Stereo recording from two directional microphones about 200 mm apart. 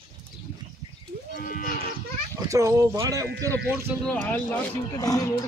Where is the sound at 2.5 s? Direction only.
15° right (ahead or behind).